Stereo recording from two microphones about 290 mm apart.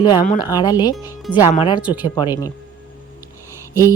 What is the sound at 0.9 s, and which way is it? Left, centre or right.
Speech, centre.